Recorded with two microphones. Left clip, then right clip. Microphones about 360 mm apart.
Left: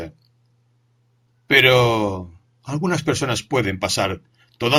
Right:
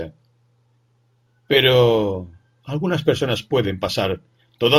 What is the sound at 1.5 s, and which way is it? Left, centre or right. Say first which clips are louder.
Speech: even; centre.